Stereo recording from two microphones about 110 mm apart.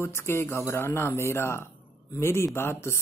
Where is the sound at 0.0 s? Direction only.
20° left (ahead or behind).